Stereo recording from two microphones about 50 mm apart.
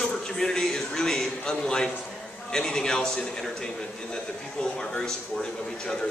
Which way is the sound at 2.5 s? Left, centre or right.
Centre.